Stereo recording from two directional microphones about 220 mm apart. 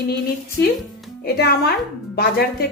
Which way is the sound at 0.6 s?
55° left (ahead or behind).